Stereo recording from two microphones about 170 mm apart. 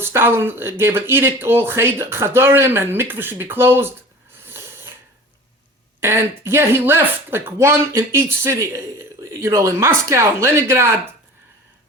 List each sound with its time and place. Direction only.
0.0 s speech: 15° right (ahead or behind)
4.4 s a sound: 15° right (ahead or behind)
6.0 s speech: 15° right (ahead or behind)